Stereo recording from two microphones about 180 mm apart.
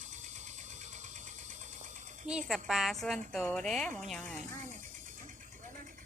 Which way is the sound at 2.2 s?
5° right (ahead or behind).